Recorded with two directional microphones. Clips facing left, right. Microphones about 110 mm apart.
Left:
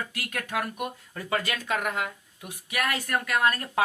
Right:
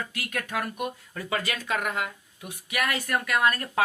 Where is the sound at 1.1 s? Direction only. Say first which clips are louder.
Left 2 dB; 45° left (ahead or behind).